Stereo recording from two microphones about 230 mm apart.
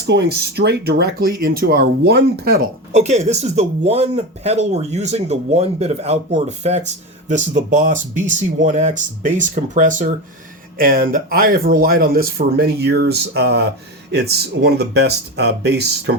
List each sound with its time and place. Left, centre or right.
0.0 s speech: right
2.9 s speech: right